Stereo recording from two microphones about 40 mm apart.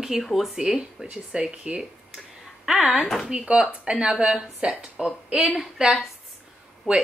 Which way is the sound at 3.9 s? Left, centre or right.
Right.